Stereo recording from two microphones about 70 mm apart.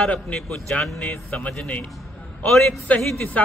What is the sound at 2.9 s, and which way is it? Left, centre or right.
Speech, left.